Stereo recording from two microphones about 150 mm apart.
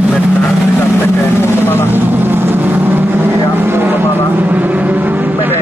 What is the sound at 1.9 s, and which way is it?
Vehicle, 15° right (ahead or behind).